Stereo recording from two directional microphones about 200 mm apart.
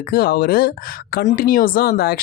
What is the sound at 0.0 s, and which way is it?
A woman's voice, 50° left (ahead or behind).